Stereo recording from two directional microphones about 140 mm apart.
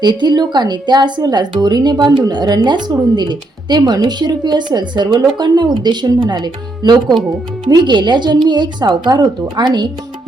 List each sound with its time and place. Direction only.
0.0 s a woman's voice: 30° right (ahead or behind)